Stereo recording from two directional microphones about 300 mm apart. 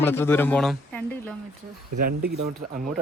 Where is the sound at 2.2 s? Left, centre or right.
Right.